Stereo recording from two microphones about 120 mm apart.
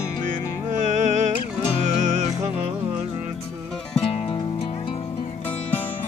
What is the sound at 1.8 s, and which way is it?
Music, 75° right (ahead or behind).